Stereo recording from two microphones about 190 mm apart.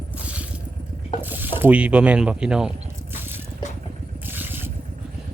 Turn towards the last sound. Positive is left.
turn(degrees=-10)  # may be behind; listen again after turning